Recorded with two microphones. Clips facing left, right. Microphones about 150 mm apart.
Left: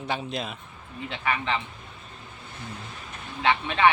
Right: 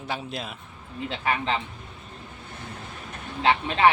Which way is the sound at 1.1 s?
35° right (ahead or behind).